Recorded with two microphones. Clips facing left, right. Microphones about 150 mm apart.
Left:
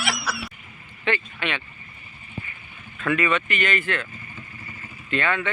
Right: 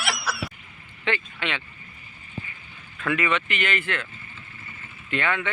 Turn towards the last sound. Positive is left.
turn(degrees=-15)  # may be behind; listen again after turning